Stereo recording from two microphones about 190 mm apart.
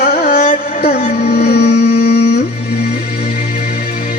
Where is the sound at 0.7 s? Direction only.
55° left (ahead or behind).